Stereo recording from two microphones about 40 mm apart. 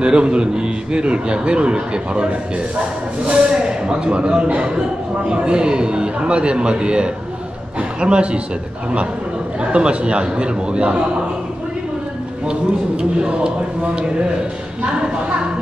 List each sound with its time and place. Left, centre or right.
0.0 s a man's voice: right
9.6 s a man's voice: right
12.4 s a man's voice: right